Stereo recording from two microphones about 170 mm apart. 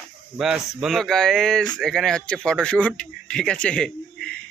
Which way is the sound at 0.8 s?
Centre (ahead or behind).